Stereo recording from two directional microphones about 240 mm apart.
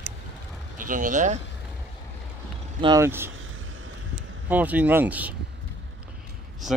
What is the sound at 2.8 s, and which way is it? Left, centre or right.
Speech, centre.